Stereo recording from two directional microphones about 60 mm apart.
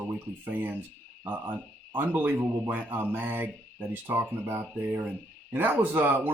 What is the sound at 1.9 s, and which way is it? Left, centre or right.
Speech, right.